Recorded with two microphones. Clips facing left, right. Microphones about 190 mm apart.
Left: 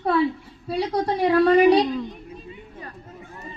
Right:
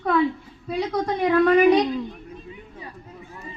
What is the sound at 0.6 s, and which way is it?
A woman's voice, 35° left (ahead or behind).